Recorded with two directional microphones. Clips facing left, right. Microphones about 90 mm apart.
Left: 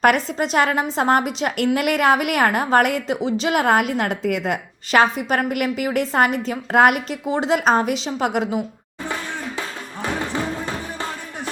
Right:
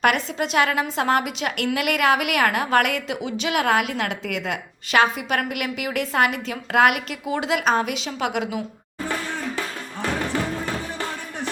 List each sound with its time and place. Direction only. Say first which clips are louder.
0.0 s a woman's voice: left 4 dB; 40° left (ahead or behind)
9.6 s music: even; 20° left (ahead or behind)